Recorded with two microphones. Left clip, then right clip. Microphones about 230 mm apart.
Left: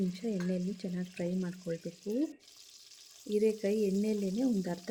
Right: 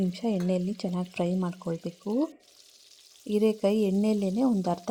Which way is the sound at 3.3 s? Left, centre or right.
Right.